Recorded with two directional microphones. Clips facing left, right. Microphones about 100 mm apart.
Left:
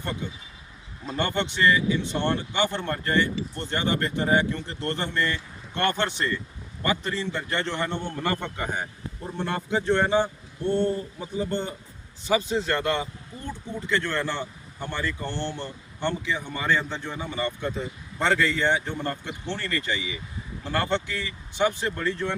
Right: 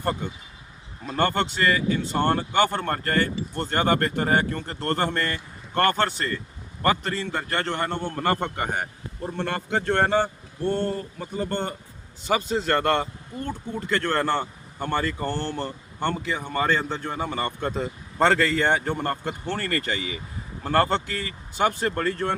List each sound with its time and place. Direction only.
0.0 s a man's voice: 45° right (ahead or behind)